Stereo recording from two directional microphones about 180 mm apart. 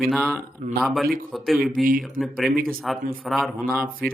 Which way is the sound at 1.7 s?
50° right (ahead or behind).